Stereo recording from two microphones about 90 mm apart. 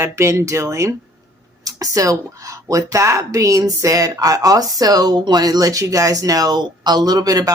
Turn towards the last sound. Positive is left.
turn(degrees=-45)  # may be behind; listen again after turning